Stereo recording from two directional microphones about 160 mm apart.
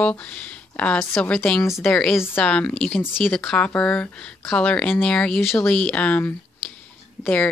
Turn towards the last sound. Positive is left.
turn(degrees=10)  # may be behind; listen again after turning